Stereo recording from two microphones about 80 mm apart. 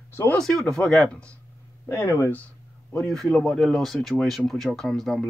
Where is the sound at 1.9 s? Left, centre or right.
Left.